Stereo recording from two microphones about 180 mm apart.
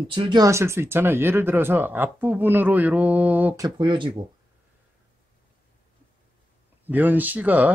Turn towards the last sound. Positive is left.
turn(degrees=-10)  # may be behind; listen again after turning